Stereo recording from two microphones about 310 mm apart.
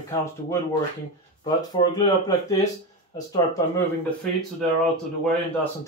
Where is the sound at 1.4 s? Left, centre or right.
Centre.